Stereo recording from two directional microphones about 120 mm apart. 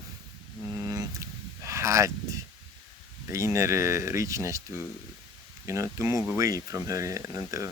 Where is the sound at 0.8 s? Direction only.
25° right (ahead or behind).